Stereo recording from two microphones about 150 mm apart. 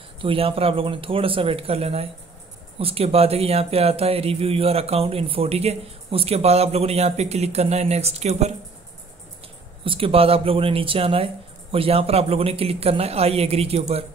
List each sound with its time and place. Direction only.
0.2 s speech: 35° right (ahead or behind)
9.8 s speech: 40° right (ahead or behind)